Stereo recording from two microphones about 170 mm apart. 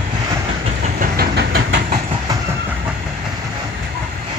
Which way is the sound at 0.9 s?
65° right (ahead or behind).